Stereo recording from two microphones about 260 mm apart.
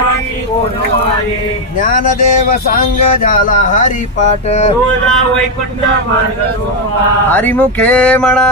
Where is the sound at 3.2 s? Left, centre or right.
Left.